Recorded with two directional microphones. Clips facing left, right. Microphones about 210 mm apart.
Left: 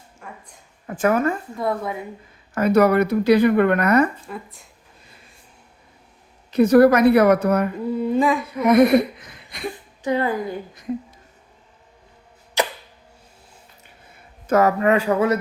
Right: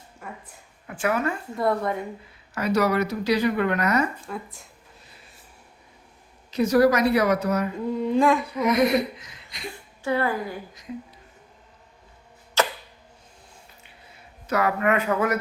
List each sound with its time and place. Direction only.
0.2 s a woman's voice: 5° right (ahead or behind)
0.9 s a woman's voice: 45° left (ahead or behind)
1.5 s humming: 5° left (ahead or behind)
2.6 s speech: 55° left (ahead or behind)
4.3 s humming: centre (ahead or behind)
6.5 s speech: 55° left (ahead or behind)
7.9 s humming: 5° left (ahead or behind)
8.6 s speech: 55° left (ahead or behind)
10.0 s a woman's voice: 20° left (ahead or behind)
12.6 s arrow: 15° left (ahead or behind)
14.4 s speech: 45° left (ahead or behind)
14.8 s speech: 30° left (ahead or behind)